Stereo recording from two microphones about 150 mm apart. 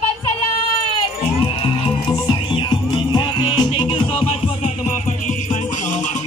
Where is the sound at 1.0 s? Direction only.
35° left (ahead or behind).